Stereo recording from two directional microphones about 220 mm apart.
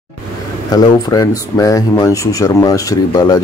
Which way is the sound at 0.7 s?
15° left (ahead or behind).